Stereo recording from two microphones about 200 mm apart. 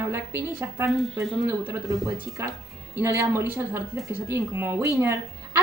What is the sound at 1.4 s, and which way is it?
A woman's voice, 15° right (ahead or behind).